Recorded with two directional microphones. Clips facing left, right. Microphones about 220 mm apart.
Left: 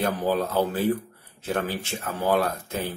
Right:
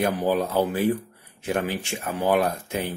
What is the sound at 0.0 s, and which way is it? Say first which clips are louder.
Speech: right 2 dB; 15° right (ahead or behind).